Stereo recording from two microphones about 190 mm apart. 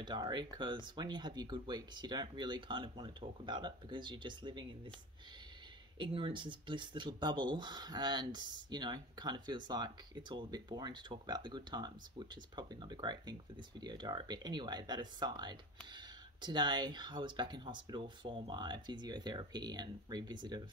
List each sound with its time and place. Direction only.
0.0 s speech: 25° right (ahead or behind)
5.9 s speech: 25° right (ahead or behind)